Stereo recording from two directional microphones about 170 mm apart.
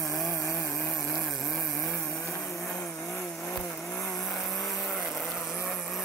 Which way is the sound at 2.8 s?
5° left (ahead or behind).